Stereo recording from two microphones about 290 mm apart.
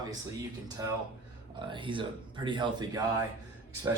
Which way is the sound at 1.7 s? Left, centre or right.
Centre.